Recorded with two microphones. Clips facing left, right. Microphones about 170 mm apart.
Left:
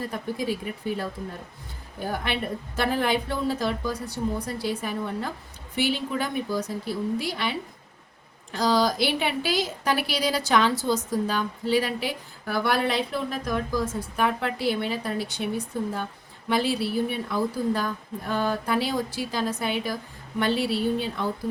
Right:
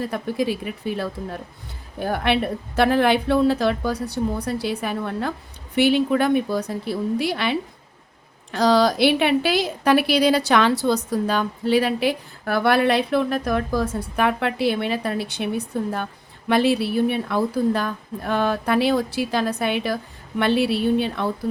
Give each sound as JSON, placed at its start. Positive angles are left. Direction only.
{"t": 0.1, "sound": "a woman's voice", "side_deg": -70}
{"t": 8.5, "sound": "a woman's voice", "side_deg": -65}